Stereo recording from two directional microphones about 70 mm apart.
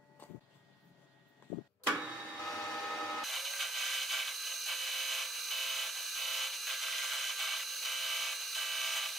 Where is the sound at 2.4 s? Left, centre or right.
Centre.